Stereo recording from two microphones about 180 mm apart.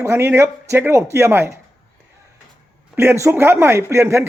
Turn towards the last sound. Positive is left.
turn(degrees=-15)  # may be behind; listen again after turning